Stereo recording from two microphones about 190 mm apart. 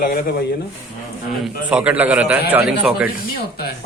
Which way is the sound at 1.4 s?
5° right (ahead or behind).